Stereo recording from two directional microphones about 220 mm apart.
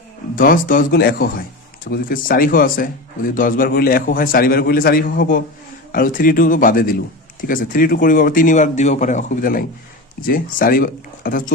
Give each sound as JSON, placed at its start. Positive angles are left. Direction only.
{"t": 0.3, "sound": "a man's voice", "side_deg": 40}